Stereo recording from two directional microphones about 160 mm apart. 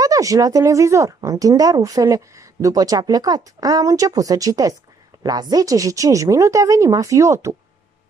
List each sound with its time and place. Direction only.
0.0 s speech: 20° right (ahead or behind)